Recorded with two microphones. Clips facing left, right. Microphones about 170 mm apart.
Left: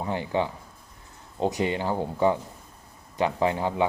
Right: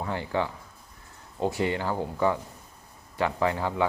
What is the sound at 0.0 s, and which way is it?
Speech, 20° left (ahead or behind).